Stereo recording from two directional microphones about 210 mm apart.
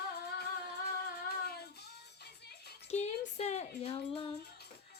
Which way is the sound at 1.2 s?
50° left (ahead or behind).